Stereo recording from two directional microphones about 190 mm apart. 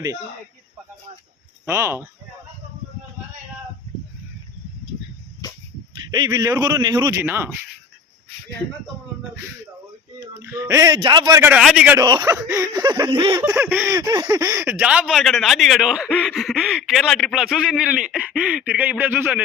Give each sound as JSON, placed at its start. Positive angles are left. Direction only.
{"t": 1.6, "sound": "a man's voice", "side_deg": -10}
{"t": 6.1, "sound": "a man's voice", "side_deg": -20}
{"t": 10.2, "sound": "a man's voice", "side_deg": -15}
{"t": 11.9, "sound": "speech", "side_deg": -20}
{"t": 13.4, "sound": "a man's voice", "side_deg": -10}